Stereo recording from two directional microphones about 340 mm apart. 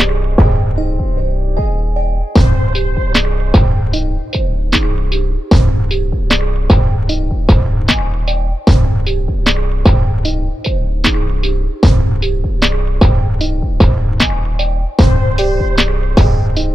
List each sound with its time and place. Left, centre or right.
0.0 s music: centre
2.3 s music: centre